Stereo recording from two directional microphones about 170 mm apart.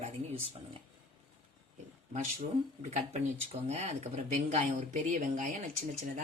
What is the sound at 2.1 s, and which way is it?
Speech, 45° right (ahead or behind).